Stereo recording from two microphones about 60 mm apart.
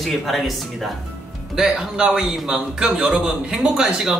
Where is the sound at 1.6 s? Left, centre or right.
Centre.